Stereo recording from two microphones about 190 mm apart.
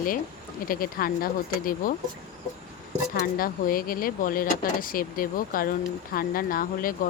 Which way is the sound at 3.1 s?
50° left (ahead or behind).